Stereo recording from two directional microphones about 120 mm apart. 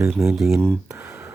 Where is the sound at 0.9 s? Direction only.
25° right (ahead or behind).